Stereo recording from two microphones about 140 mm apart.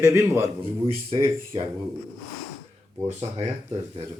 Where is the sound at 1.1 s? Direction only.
35° right (ahead or behind).